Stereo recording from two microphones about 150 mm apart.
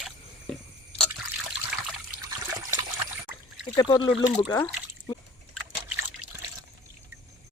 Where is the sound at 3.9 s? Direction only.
30° left (ahead or behind).